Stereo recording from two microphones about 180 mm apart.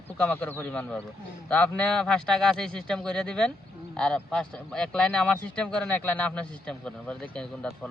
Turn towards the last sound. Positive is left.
turn(degrees=5)  # may be behind; listen again after turning